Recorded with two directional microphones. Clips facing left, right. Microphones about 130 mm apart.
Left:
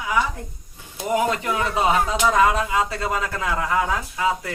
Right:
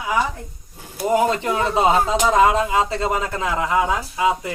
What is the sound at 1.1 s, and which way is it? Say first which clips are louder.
Speech: right 3 dB; 30° right (ahead or behind).